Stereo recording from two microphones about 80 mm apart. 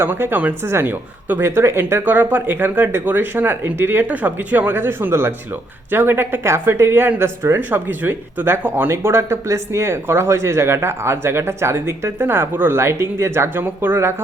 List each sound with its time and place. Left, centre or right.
0.0 s speech: right